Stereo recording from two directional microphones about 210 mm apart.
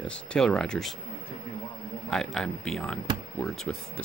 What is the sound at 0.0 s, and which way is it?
Speech, 5° left (ahead or behind).